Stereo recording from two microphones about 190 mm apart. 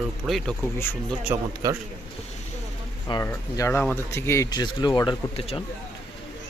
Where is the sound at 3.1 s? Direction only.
20° left (ahead or behind).